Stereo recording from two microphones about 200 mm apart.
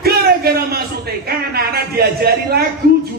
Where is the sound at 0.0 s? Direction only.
50° right (ahead or behind).